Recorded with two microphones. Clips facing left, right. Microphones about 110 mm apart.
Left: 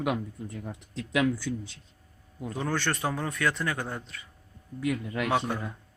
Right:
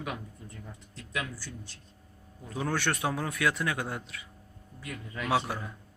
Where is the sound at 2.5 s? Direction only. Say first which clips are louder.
Left 1 dB; centre (ahead or behind).